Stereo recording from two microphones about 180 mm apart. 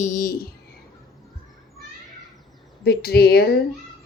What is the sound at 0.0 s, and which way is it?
Speech, 50° left (ahead or behind).